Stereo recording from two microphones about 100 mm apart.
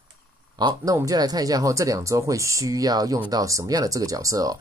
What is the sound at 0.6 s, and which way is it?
Speech, 45° right (ahead or behind).